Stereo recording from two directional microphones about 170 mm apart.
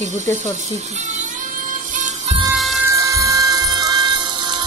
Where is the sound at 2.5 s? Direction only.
Centre (ahead or behind).